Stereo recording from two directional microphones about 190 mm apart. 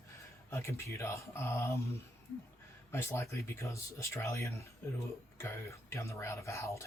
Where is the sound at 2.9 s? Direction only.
15° left (ahead or behind).